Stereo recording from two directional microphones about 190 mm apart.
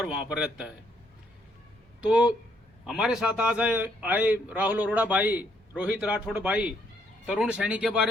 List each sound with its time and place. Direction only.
0.0 s speech: 5° right (ahead or behind)
2.0 s a man's voice: 5° right (ahead or behind)